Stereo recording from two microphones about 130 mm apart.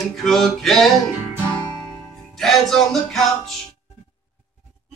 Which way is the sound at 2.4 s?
5° left (ahead or behind).